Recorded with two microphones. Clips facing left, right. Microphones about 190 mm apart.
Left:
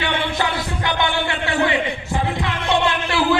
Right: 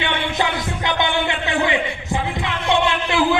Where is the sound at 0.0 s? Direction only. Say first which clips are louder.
Even; 20° right (ahead or behind).